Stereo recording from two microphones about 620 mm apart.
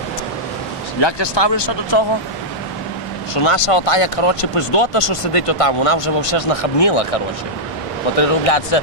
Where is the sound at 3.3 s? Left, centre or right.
Left.